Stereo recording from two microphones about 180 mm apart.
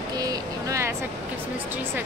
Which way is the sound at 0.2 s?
20° right (ahead or behind).